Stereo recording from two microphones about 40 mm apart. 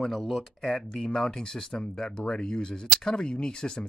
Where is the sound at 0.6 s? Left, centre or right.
Centre.